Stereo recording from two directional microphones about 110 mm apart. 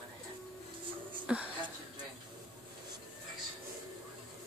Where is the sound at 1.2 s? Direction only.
10° right (ahead or behind).